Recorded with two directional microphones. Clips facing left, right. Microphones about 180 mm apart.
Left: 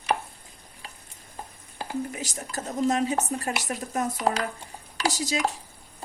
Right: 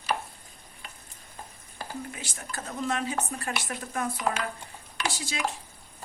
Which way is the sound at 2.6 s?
25° left (ahead or behind).